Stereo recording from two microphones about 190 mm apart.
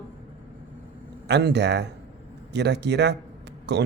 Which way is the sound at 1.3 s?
60° right (ahead or behind).